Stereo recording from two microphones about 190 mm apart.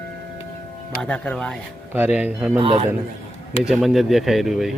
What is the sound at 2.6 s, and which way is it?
Speech, 30° right (ahead or behind).